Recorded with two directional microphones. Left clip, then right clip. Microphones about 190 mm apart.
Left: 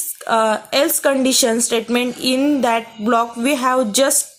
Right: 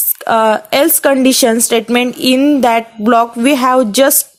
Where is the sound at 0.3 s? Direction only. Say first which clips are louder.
Right 6 dB; 40° right (ahead or behind).